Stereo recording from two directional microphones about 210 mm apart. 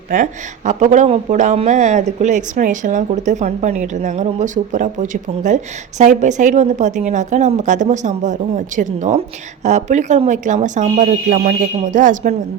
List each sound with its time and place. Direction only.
0.1 s speech: 35° right (ahead or behind)